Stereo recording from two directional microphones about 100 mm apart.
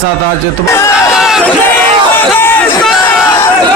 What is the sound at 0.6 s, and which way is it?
Speech, 30° left (ahead or behind).